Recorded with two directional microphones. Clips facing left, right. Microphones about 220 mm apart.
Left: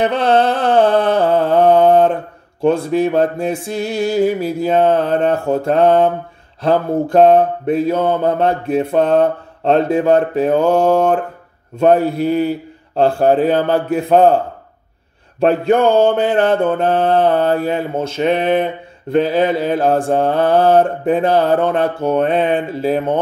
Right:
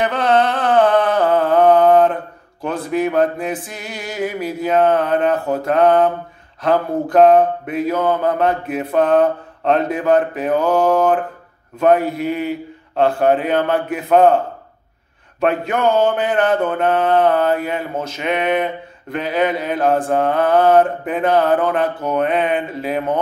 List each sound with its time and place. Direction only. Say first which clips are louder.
0.0 s a sound: left 2 dB; 30° left (ahead or behind)
2.6 s mantra: left 6 dB; 30° left (ahead or behind)
15.4 s mantra: left 5 dB; 30° left (ahead or behind)